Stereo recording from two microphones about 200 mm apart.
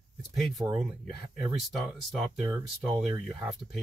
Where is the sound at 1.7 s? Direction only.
Centre (ahead or behind).